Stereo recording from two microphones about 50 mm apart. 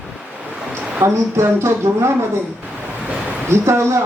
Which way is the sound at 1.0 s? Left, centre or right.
Right.